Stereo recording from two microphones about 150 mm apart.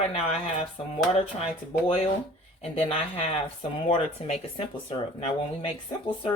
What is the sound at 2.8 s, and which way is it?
Speech, 40° left (ahead or behind).